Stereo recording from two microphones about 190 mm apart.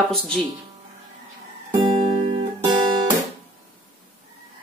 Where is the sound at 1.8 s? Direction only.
30° right (ahead or behind).